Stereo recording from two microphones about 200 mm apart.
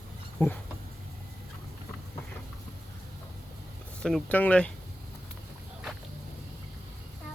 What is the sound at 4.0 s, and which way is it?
Speech, 5° left (ahead or behind).